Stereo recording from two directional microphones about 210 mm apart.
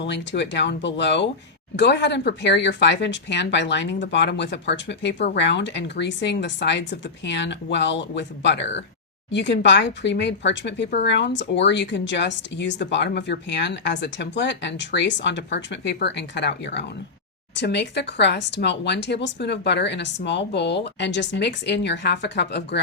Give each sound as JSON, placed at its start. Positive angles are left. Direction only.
{"t": 0.0, "sound": "speech", "side_deg": 55}